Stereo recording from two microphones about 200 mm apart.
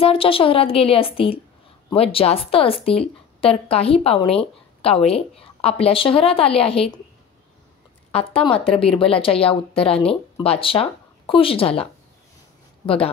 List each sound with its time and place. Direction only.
0.0 s speech: 25° left (ahead or behind)
8.1 s speech: 30° left (ahead or behind)